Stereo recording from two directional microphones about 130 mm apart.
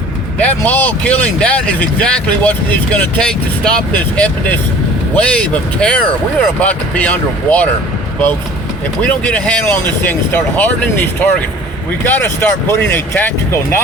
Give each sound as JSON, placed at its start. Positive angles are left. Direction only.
{"t": 0.3, "sound": "speech", "side_deg": 10}
{"t": 9.0, "sound": "speech", "side_deg": 10}